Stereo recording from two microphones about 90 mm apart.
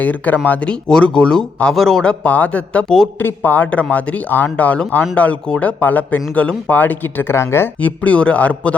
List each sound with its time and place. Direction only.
0.0 s speech: 20° left (ahead or behind)
7.8 s speech: 15° left (ahead or behind)